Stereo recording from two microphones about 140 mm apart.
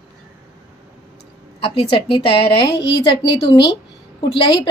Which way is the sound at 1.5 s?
40° left (ahead or behind).